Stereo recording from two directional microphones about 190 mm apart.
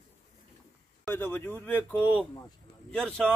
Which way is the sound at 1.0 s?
10° left (ahead or behind).